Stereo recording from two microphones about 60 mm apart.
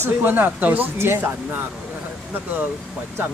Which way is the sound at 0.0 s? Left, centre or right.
Right.